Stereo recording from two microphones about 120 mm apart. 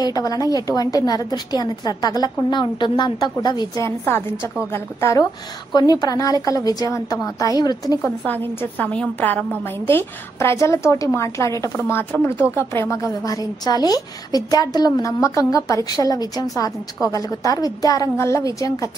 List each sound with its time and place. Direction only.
0.0 s a woman's voice: 30° left (ahead or behind)
3.8 s a woman's voice: 20° left (ahead or behind)
8.5 s a woman's voice: 15° left (ahead or behind)